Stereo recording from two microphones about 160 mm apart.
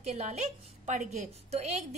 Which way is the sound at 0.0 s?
40° right (ahead or behind).